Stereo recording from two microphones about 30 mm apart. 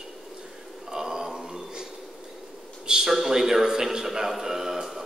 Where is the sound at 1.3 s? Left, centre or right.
Right.